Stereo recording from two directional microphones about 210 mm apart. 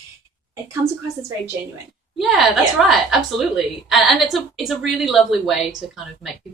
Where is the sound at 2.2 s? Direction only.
Centre (ahead or behind).